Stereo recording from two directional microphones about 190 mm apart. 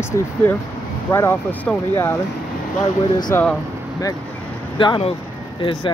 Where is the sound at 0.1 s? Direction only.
15° left (ahead or behind).